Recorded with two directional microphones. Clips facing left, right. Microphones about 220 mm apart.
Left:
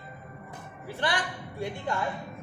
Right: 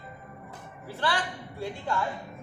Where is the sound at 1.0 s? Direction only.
15° left (ahead or behind).